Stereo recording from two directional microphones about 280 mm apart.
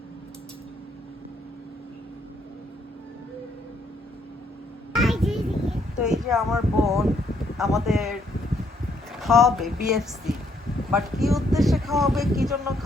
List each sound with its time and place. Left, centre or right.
4.9 s a sound: centre
7.5 s speech: centre
9.1 s speech: centre